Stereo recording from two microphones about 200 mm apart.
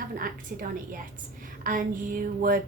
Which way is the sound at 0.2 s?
45° right (ahead or behind).